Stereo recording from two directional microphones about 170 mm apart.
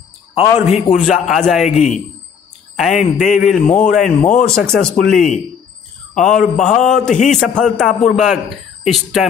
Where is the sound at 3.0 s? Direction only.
45° left (ahead or behind).